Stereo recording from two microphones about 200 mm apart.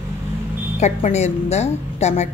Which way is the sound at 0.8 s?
35° left (ahead or behind).